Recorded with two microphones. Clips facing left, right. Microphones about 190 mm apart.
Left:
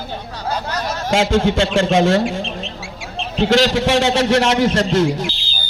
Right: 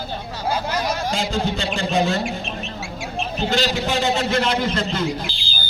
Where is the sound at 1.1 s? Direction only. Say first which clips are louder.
Left 7 dB; 90° left.